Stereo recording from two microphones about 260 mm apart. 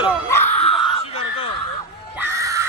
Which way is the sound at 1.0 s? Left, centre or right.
Left.